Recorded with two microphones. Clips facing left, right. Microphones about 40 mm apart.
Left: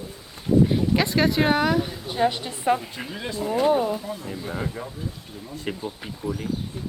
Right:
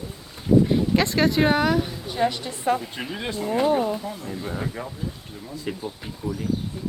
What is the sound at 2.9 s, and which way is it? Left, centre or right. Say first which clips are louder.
Speech: right 2 dB; centre.